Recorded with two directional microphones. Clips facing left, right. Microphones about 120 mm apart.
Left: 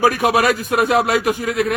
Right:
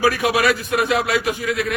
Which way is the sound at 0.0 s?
45° left (ahead or behind).